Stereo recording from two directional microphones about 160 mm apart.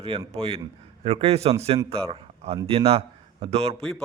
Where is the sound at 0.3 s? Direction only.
40° right (ahead or behind).